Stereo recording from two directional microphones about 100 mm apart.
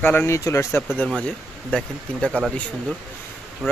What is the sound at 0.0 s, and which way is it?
Speech, 15° left (ahead or behind).